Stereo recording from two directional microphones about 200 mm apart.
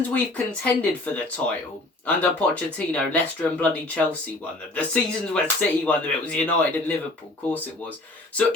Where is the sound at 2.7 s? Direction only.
5° left (ahead or behind).